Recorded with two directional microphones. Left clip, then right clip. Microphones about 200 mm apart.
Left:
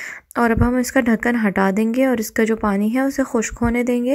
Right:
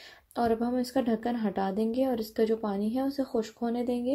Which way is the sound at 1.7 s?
90° left.